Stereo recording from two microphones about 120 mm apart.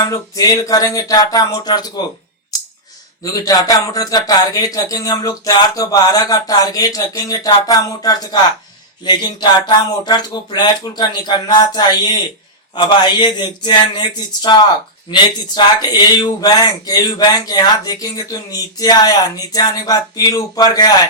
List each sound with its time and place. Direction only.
0.0 s speech: 30° left (ahead or behind)
3.4 s speech: 30° left (ahead or behind)